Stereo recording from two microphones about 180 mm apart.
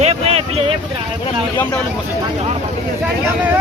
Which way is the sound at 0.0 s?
35° right (ahead or behind).